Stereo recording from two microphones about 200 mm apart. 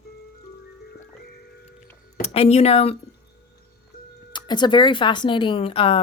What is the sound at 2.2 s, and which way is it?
Speech, 30° left (ahead or behind).